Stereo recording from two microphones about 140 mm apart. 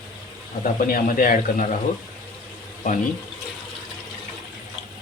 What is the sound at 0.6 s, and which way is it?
A man's voice, 85° left.